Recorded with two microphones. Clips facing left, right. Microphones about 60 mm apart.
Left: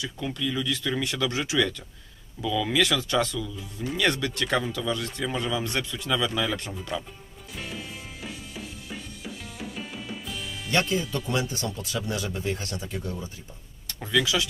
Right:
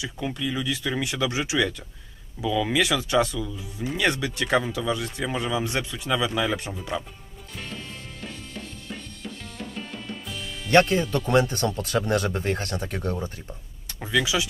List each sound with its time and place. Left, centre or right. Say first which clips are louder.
0.0 s speech: right 1 dB; centre
7.5 s music: even; centre
10.7 s speech: right 7 dB; right
13.8 s speech: right 1 dB; centre